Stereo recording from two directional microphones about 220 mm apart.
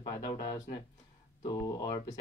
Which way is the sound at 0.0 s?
20° left (ahead or behind).